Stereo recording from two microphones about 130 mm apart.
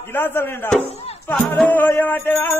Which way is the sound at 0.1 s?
15° left (ahead or behind).